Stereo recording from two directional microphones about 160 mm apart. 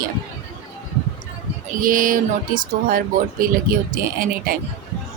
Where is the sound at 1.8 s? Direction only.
60° right (ahead or behind).